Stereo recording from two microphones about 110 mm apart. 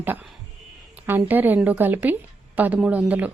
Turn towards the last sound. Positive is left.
turn(degrees=-15)  # may be behind; listen again after turning